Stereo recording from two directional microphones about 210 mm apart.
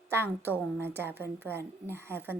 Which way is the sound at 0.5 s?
10° right (ahead or behind).